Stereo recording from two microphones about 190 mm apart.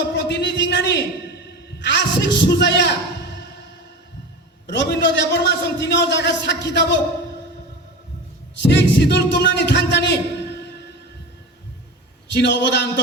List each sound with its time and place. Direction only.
0.3 s a man's voice: 65° left (ahead or behind)
4.6 s a man's voice: 70° left (ahead or behind)
8.6 s a man's voice: 65° left (ahead or behind)
12.3 s a man's voice: 65° left (ahead or behind)